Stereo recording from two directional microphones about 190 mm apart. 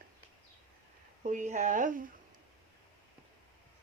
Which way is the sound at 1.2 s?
40° right (ahead or behind).